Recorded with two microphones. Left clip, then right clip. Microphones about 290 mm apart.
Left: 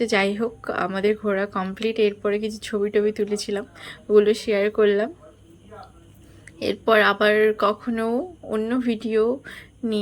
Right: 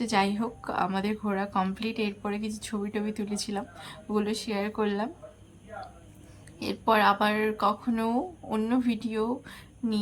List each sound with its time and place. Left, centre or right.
0.0 s a woman's voice: centre
6.6 s a woman's voice: centre